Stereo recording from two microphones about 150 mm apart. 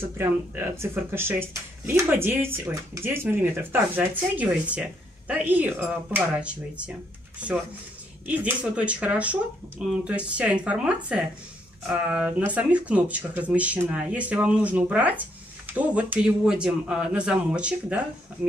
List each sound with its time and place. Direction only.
0.0 s speech: 15° right (ahead or behind)